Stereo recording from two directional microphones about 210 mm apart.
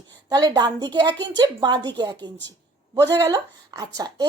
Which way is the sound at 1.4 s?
20° right (ahead or behind).